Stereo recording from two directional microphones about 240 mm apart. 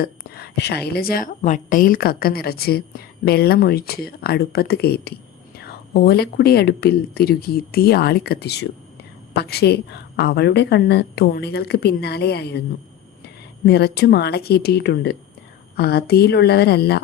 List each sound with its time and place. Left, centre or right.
0.0 s a woman's voice: left